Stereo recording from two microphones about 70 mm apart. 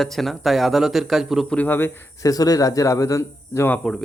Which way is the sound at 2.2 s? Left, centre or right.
Left.